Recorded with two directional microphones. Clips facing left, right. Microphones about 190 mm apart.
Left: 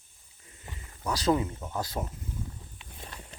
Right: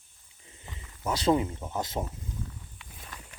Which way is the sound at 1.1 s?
25° right (ahead or behind).